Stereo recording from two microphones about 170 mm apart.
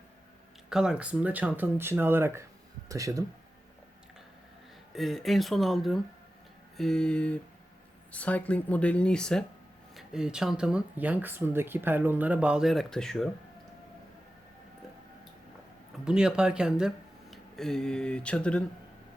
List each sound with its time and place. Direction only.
0.7 s speech: 5° right (ahead or behind); by 3.2 s 20° right (ahead or behind)
4.9 s speech: centre (ahead or behind)
16.0 s speech: 5° right (ahead or behind)